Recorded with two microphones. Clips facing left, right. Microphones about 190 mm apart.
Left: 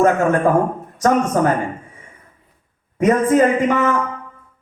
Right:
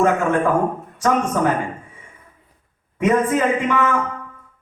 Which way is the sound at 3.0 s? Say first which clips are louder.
Left 4 dB; 40° left (ahead or behind).